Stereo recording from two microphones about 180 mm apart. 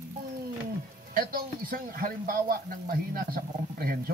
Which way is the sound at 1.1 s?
55° right (ahead or behind).